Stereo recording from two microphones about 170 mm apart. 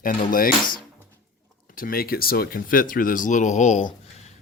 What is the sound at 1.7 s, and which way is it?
Speech, 60° left (ahead or behind).